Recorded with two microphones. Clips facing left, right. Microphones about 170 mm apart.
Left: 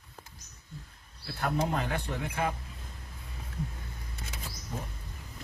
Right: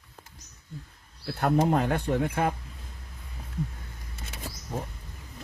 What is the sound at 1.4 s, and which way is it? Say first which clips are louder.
Speech: right 7 dB; 50° right (ahead or behind).